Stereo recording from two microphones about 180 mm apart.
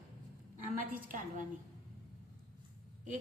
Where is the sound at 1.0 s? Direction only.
50° right (ahead or behind).